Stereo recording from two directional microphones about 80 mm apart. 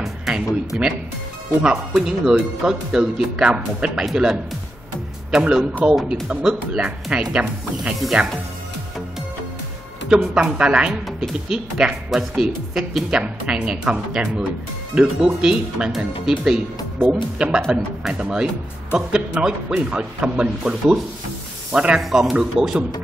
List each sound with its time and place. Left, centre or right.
0.0 s music: centre
0.7 s speech: centre
4.0 s speech: centre
10.0 s speech: centre